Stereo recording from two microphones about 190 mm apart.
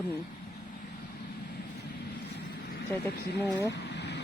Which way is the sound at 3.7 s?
60° left (ahead or behind).